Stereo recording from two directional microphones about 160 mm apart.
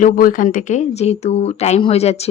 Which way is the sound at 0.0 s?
60° left (ahead or behind).